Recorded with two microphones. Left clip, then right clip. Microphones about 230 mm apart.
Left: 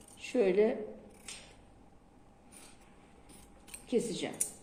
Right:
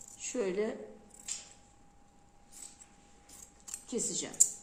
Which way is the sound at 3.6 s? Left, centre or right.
Centre.